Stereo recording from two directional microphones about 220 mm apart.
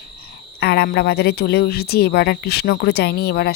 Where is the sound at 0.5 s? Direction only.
45° left (ahead or behind).